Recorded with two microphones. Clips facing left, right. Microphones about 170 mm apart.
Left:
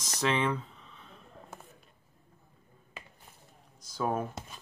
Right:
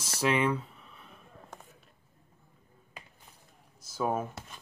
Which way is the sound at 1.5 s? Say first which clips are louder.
Even; 5° left (ahead or behind).